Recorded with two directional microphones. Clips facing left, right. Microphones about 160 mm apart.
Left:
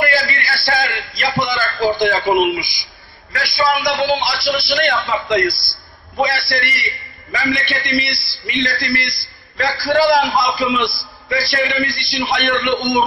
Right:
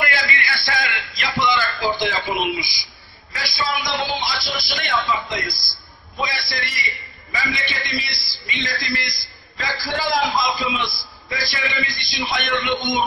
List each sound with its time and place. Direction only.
0.0 s a sound: 35° left (ahead or behind); by 2.9 s 50° left (ahead or behind)
3.3 s a man's voice: 60° left (ahead or behind)
11.2 s a man's voice: 65° left (ahead or behind)